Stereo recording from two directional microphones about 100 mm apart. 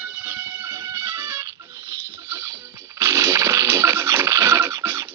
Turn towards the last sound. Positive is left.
turn(degrees=-30)  # may be behind; listen again after turning